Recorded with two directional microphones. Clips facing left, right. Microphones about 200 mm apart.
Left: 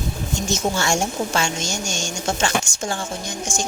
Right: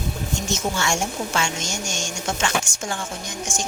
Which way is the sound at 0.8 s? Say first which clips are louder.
Left 3 dB; 35° left (ahead or behind).